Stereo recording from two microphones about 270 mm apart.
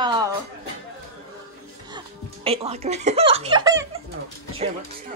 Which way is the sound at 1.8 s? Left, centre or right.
Centre.